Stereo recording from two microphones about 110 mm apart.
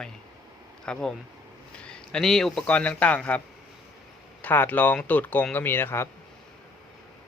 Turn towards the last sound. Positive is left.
turn(degrees=20)  # may be behind; listen again after turning